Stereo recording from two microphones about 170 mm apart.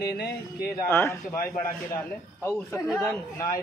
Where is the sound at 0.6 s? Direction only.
15° left (ahead or behind).